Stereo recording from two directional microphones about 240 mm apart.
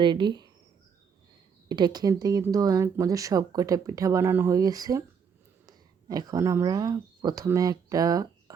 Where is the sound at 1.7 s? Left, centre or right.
Centre.